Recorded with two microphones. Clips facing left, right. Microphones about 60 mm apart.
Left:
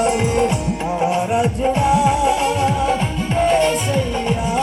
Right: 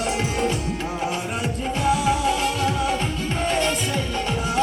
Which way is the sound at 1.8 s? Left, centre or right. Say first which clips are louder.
Left 4 dB; left.